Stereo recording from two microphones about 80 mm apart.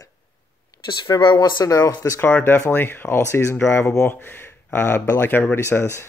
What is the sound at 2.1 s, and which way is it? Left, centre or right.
Speech, left.